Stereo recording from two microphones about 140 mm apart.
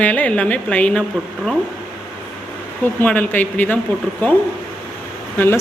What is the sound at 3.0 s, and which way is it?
Speech, 10° left (ahead or behind).